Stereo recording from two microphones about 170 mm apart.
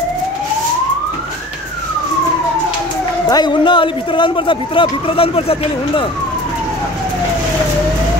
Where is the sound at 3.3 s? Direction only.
25° left (ahead or behind).